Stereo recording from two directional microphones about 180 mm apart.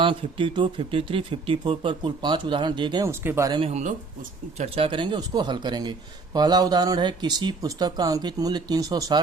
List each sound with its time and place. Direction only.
0.0 s speech: 30° right (ahead or behind)
3.1 s speech: 15° right (ahead or behind)
3.6 s speech: 40° right (ahead or behind); by 9.2 s 20° right (ahead or behind)